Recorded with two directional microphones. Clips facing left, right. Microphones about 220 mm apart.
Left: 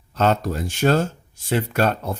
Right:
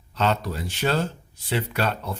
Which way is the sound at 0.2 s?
45° left (ahead or behind).